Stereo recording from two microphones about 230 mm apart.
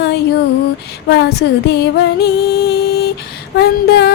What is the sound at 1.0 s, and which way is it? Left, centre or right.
Music, left.